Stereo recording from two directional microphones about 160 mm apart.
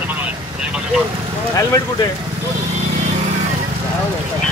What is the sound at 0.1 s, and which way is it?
Vehicle, 10° right (ahead or behind).